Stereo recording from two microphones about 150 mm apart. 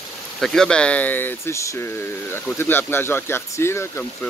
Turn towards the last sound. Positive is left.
turn(degrees=15)  # may be behind; listen again after turning